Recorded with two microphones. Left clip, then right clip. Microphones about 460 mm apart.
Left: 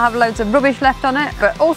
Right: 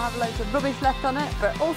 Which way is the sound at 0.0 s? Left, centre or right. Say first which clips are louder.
Left 12 dB; left.